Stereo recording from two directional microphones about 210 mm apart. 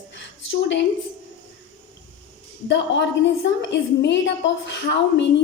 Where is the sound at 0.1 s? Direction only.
60° left (ahead or behind).